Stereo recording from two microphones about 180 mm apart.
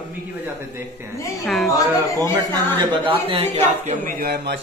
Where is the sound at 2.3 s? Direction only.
25° right (ahead or behind).